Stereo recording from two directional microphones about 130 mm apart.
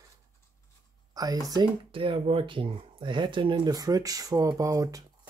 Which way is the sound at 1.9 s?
40° right (ahead or behind).